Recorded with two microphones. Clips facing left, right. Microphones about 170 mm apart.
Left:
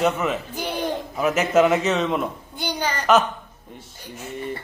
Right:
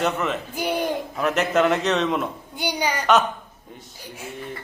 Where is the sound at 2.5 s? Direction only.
10° right (ahead or behind).